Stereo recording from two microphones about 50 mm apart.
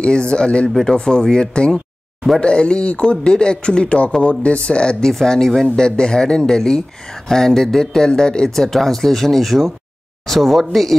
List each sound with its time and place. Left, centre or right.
0.0 s speech: centre
0.7 s speech: centre